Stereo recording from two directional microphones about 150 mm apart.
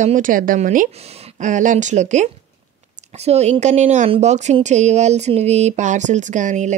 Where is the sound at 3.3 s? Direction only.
45° right (ahead or behind).